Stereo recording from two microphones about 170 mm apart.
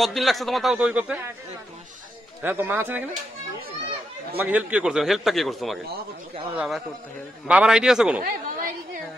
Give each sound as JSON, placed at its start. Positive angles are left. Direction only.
{"t": 0.0, "sound": "a man's voice", "side_deg": 0}
{"t": 2.4, "sound": "speech", "side_deg": -10}
{"t": 4.4, "sound": "a man's voice", "side_deg": -10}
{"t": 8.2, "sound": "a woman's voice", "side_deg": -55}